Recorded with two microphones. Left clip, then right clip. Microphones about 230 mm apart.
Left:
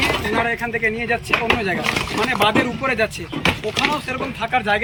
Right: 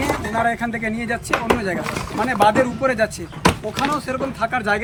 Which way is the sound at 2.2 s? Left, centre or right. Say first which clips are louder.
Right 2 dB; centre.